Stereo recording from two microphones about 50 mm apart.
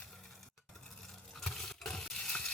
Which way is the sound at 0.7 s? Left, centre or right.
Centre.